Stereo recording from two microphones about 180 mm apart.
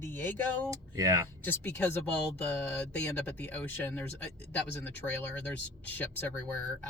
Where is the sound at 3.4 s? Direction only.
10° left (ahead or behind).